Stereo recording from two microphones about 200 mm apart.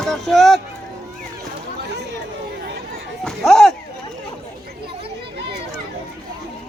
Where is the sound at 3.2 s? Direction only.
Centre (ahead or behind).